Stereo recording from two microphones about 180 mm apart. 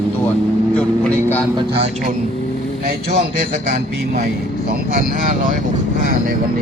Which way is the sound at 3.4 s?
50° right (ahead or behind).